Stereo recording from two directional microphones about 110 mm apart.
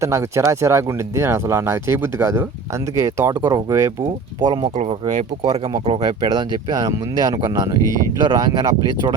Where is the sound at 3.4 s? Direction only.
40° right (ahead or behind).